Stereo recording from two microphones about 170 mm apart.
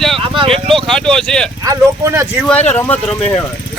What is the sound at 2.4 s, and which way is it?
Speech, 5° left (ahead or behind).